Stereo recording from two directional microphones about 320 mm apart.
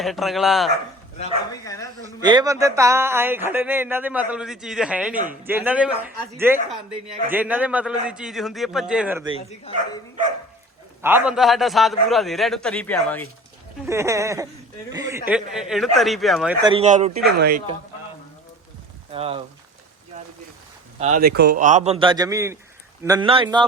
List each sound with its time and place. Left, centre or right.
0.0 s a man's voice: centre
1.2 s speech: centre
2.2 s speech: centre
5.1 s speech: right
5.5 s a man's voice: centre
9.7 s speech: centre
11.0 s a man's voice: centre
13.8 s a man's voice: centre
16.6 s speech: centre
19.1 s speech: centre
21.0 s speech: right